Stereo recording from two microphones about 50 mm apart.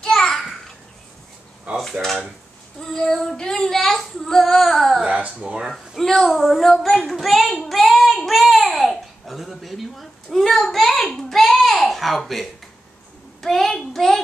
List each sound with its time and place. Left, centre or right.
0.0 s a sound: centre
1.8 s dishes: centre
2.8 s child singing: centre
5.0 s a sound: right
5.7 s a child's voice: centre
7.5 s child singing: centre
11.9 s a child's voice: centre